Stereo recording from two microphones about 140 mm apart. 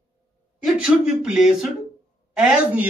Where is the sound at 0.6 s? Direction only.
5° right (ahead or behind).